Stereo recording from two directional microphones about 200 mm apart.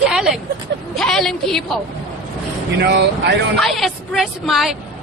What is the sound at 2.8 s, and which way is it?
Speech, 60° right (ahead or behind).